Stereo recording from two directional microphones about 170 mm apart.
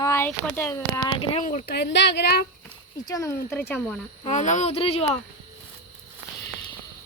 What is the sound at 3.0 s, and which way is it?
Speech, 20° left (ahead or behind).